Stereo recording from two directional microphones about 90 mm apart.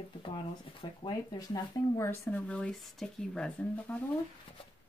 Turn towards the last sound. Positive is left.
turn(degrees=10)  # may be behind; listen again after turning